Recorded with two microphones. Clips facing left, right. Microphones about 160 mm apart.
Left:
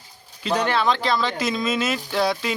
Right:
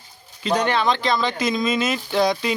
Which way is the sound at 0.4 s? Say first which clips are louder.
Right 1 dB; 5° left (ahead or behind).